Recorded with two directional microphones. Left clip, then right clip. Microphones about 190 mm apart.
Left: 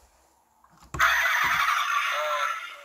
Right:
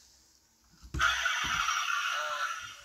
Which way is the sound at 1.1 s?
30° left (ahead or behind).